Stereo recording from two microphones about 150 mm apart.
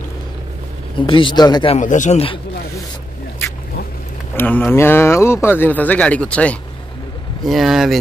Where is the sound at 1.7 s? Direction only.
55° left (ahead or behind).